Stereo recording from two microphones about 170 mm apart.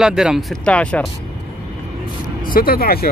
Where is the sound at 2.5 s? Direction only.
60° left (ahead or behind).